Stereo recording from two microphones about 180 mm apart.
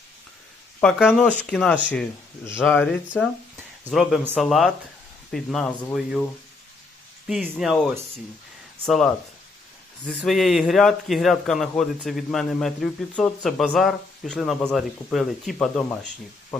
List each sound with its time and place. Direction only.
0.8 s speech: centre (ahead or behind)
4.4 s speech: centre (ahead or behind)
7.4 s speech: centre (ahead or behind)